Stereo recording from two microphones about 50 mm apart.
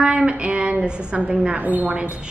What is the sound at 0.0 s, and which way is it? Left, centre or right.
Speech, right.